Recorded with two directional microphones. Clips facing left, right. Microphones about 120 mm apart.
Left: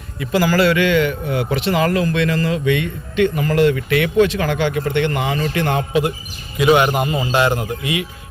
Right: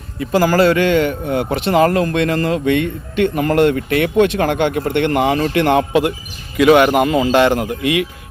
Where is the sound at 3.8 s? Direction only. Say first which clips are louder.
Right 1 dB; 45° right (ahead or behind).